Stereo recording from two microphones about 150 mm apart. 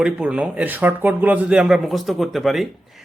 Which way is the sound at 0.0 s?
10° right (ahead or behind).